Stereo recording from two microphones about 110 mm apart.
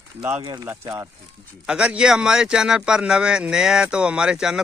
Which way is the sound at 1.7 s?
10° right (ahead or behind).